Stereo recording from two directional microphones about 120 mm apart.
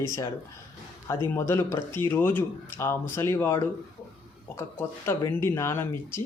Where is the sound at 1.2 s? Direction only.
20° left (ahead or behind).